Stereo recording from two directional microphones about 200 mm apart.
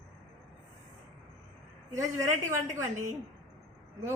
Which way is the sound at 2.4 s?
15° right (ahead or behind).